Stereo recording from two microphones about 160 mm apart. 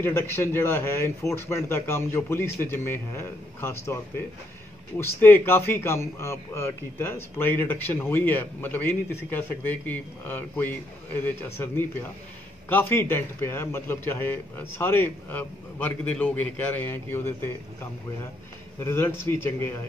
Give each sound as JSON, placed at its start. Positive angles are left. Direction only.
{"t": 0.0, "sound": "a man's voice", "side_deg": 15}
{"t": 18.8, "sound": "a man's voice", "side_deg": 15}